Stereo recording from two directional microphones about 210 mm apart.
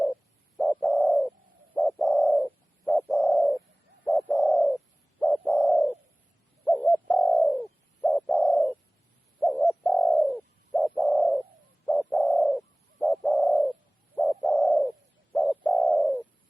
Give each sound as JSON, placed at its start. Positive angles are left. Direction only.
{"t": 0.0, "sound": "bird", "side_deg": 0}